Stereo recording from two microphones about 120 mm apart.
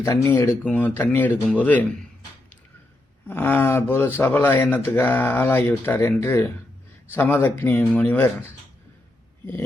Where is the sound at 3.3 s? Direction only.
15° left (ahead or behind).